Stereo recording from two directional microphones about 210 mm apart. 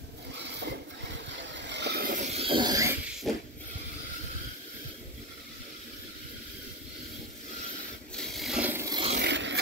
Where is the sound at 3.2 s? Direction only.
Centre (ahead or behind).